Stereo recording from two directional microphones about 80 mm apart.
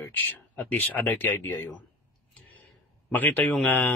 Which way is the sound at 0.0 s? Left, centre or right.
Left.